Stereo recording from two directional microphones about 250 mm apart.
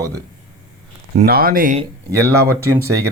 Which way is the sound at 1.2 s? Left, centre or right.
Right.